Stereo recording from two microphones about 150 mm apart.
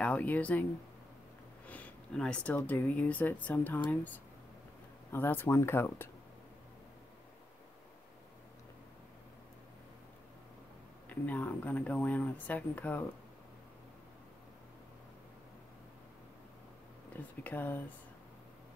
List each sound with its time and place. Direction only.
0.0 s speech: 10° left (ahead or behind)
1.7 s speech: 10° left (ahead or behind)
11.1 s speech: 10° left (ahead or behind)
17.1 s speech: 10° left (ahead or behind)